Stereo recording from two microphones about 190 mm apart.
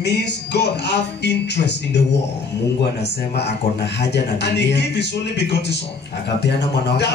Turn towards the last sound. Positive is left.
turn(degrees=65)  # may be behind; listen again after turning